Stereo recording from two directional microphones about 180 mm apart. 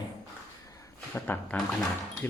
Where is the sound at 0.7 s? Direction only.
15° left (ahead or behind).